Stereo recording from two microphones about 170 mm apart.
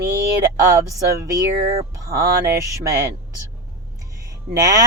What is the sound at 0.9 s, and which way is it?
Speech, 20° right (ahead or behind).